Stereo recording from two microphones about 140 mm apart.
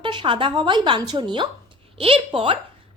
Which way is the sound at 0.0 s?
35° right (ahead or behind).